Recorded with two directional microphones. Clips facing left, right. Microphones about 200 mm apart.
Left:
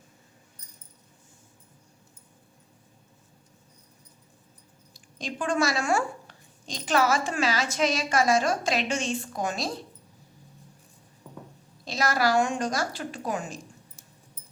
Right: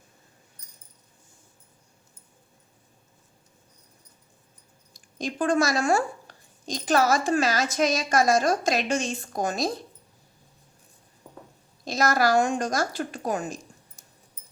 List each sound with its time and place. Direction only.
4.9 s speech: 45° right (ahead or behind)
11.9 s a woman's voice: 45° right (ahead or behind)